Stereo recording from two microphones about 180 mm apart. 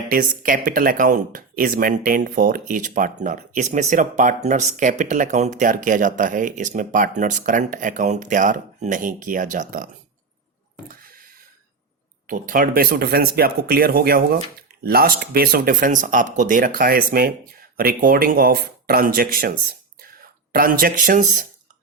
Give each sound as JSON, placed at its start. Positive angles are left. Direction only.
{"t": 0.1, "sound": "speech", "side_deg": -50}
{"t": 12.3, "sound": "speech", "side_deg": -50}